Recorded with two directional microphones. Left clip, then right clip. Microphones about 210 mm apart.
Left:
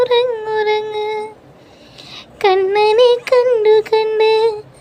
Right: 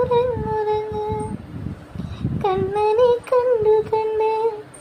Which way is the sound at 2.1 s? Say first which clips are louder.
Left 8 dB; 35° left (ahead or behind).